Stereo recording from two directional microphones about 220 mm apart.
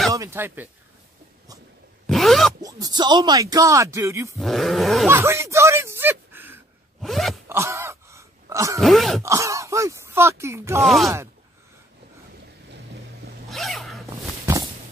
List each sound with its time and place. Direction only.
0.1 s speech: 15° right (ahead or behind)
2.0 s zipper: centre (ahead or behind)
2.6 s speech: 20° right (ahead or behind)
4.4 s speech: centre (ahead or behind)
5.0 s speech: 10° right (ahead or behind)
7.0 s zipper: centre (ahead or behind)
7.4 s groan: 10° right (ahead or behind)
8.8 s speech: centre (ahead or behind)
9.2 s speech: 15° right (ahead or behind)
10.8 s speech: centre (ahead or behind)
13.5 s a sound: centre (ahead or behind)
14.4 s a sound: 15° right (ahead or behind)